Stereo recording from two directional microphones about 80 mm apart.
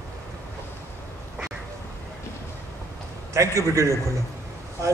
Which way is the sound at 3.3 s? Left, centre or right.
Right.